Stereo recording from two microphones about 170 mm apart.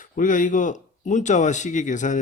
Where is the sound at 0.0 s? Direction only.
50° left (ahead or behind).